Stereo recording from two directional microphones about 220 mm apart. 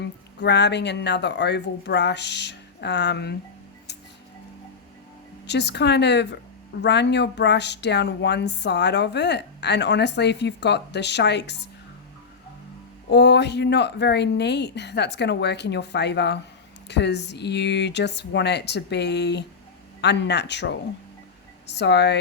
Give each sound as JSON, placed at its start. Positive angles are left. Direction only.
{"t": 0.0, "sound": "speech", "side_deg": 50}
{"t": 5.5, "sound": "speech", "side_deg": 50}
{"t": 13.1, "sound": "speech", "side_deg": 50}